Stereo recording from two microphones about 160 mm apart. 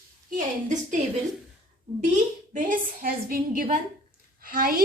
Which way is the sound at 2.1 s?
55° right (ahead or behind).